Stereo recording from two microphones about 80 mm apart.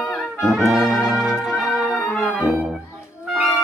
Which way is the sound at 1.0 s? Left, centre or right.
Centre.